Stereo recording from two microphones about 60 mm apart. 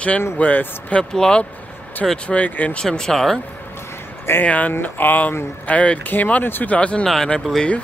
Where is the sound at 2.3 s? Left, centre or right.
Left.